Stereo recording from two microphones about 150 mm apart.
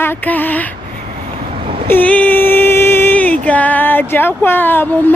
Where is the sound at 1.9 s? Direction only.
10° left (ahead or behind).